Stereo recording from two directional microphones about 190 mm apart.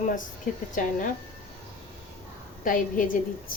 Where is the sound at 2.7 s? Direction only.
45° left (ahead or behind).